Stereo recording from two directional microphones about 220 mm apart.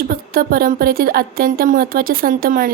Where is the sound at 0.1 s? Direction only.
40° right (ahead or behind).